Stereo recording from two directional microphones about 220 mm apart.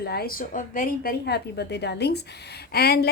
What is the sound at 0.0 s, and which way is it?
A woman's voice, 45° left (ahead or behind).